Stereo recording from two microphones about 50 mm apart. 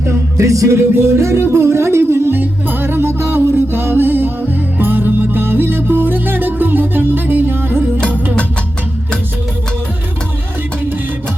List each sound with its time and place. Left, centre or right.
0.3 s speech: right
2.4 s music: right